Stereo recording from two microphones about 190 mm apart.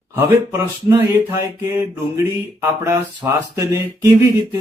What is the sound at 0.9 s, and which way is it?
Speech, 15° right (ahead or behind).